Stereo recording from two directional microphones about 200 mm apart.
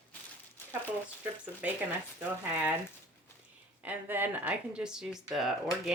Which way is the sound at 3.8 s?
10° right (ahead or behind).